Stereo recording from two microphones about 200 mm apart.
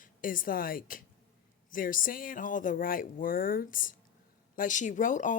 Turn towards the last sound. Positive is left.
turn(degrees=40)  # may be behind; listen again after turning